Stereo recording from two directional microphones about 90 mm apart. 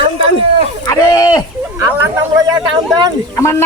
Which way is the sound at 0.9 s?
45° left (ahead or behind).